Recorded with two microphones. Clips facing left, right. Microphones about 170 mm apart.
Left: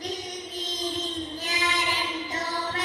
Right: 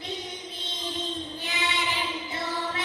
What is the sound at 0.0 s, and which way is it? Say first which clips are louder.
Music: left 2 dB; 40° left (ahead or behind).